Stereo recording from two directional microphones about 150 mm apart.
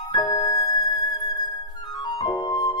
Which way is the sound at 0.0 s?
25° left (ahead or behind).